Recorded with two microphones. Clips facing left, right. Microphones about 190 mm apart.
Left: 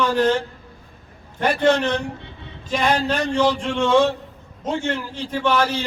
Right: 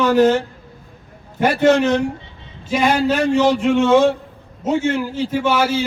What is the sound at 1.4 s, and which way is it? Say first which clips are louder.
A man's voice: right 4 dB; 5° right (ahead or behind).